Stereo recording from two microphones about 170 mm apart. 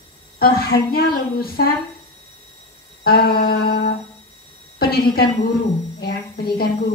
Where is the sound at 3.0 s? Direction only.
65° left (ahead or behind).